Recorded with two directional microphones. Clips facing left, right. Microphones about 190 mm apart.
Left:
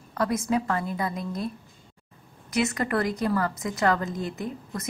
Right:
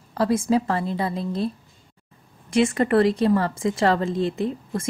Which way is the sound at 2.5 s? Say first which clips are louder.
Right 7 dB; 25° right (ahead or behind).